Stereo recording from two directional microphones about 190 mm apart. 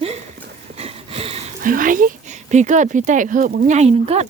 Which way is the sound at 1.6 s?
45° right (ahead or behind).